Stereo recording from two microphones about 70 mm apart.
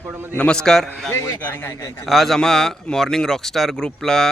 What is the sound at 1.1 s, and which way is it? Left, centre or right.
Speech, left.